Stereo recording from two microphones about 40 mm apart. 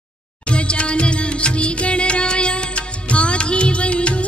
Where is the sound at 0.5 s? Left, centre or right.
Left.